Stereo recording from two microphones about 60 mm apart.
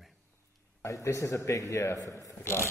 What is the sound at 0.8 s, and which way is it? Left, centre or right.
A man's voice, left.